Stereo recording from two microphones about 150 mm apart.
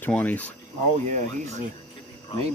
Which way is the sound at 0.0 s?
10° left (ahead or behind).